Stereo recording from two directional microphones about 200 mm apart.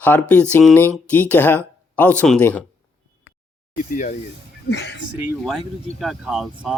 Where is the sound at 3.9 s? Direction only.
40° left (ahead or behind).